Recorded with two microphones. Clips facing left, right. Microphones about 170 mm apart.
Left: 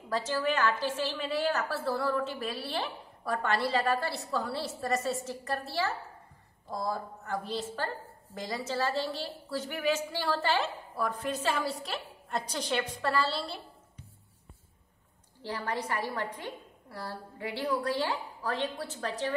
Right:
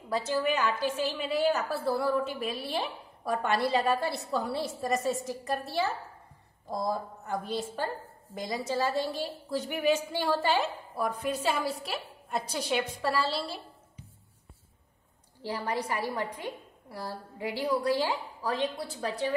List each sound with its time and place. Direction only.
0.1 s a woman's voice: 10° right (ahead or behind)
15.4 s a woman's voice: 15° right (ahead or behind)